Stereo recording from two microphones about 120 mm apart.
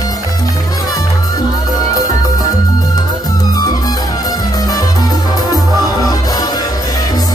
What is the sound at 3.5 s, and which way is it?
Music, 30° left (ahead or behind).